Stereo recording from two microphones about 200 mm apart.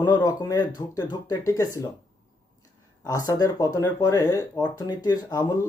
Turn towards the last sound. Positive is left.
turn(degrees=20)  # may be behind; listen again after turning